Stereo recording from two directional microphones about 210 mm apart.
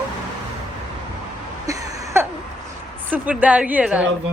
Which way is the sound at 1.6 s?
15° right (ahead or behind).